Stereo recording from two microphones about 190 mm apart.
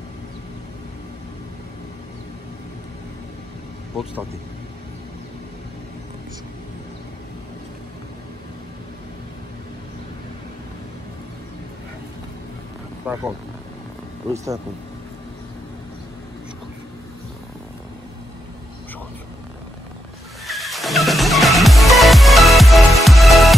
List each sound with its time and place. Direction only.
3.9 s speech: 5° right (ahead or behind)
13.0 s speech: 10° right (ahead or behind)
14.3 s speech: 15° right (ahead or behind)
20.4 s music: centre (ahead or behind)